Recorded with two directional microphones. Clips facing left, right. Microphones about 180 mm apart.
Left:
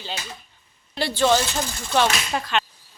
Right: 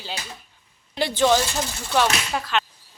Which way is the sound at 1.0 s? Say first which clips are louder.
Right 1 dB; 15° right (ahead or behind).